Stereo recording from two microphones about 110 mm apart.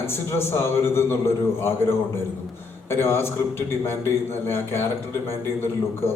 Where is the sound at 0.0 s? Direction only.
20° left (ahead or behind).